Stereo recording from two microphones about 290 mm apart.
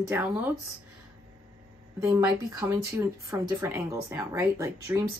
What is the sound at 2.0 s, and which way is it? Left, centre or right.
A woman's voice, centre.